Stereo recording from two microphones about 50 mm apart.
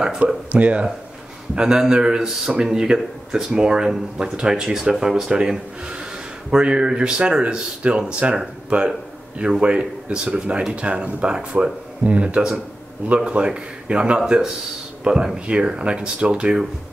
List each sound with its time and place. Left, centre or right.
0.5 s speech: right